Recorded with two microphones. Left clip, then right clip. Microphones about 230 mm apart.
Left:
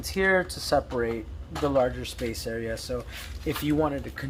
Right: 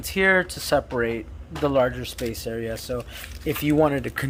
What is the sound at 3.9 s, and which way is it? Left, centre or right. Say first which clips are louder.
Speech: right 7 dB; right.